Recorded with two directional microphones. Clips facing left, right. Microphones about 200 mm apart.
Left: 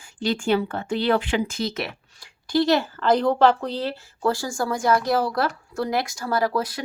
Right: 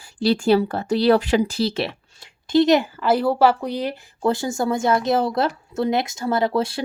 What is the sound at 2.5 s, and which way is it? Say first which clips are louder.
Speech: right 4 dB; 20° right (ahead or behind).